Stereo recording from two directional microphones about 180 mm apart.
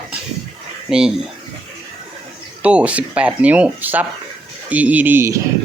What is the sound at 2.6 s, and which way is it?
Speech, 5° right (ahead or behind).